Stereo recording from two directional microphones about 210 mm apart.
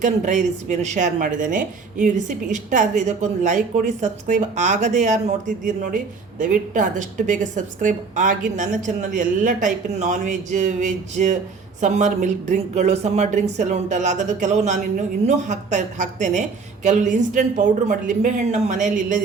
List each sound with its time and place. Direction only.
0.0 s speech: 35° right (ahead or behind)